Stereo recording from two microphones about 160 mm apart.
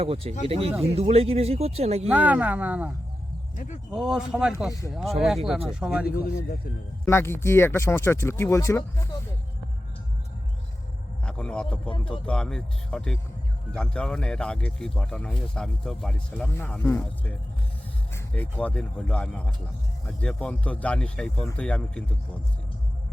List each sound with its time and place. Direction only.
0.0 s speech: 35° right (ahead or behind)
2.0 s speech: 10° right (ahead or behind)
3.5 s speech: 50° left (ahead or behind)
3.9 s speech: 5° right (ahead or behind)
7.0 s speech: 15° left (ahead or behind)
11.3 s speech: 5° left (ahead or behind)